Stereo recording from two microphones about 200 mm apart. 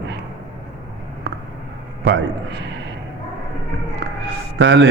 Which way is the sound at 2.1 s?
65° right (ahead or behind).